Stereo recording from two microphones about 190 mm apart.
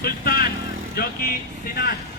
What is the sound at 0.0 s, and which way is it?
Vehicle, 50° left (ahead or behind).